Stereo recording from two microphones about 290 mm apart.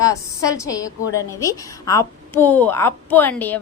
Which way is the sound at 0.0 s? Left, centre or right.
Centre.